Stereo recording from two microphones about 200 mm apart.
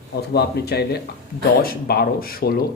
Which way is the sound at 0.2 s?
55° left (ahead or behind).